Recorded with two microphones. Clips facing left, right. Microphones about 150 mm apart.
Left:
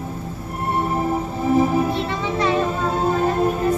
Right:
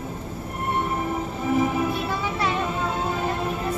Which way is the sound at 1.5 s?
35° left (ahead or behind).